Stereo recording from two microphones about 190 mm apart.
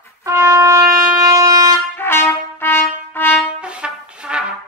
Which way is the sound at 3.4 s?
5° right (ahead or behind).